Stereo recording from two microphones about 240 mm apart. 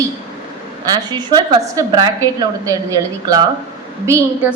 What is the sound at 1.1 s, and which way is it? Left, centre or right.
A woman's voice, centre.